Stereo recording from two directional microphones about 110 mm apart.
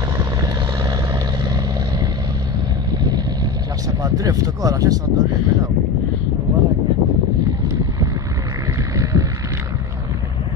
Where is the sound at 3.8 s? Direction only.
35° right (ahead or behind).